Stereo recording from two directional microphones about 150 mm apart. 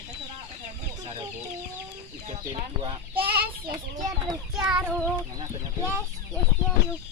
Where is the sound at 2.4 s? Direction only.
30° right (ahead or behind).